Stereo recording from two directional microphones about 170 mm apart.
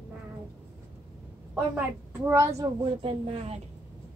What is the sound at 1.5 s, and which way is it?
A woman's voice, 15° right (ahead or behind).